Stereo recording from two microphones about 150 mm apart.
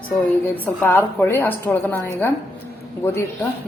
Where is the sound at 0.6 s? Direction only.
10° left (ahead or behind).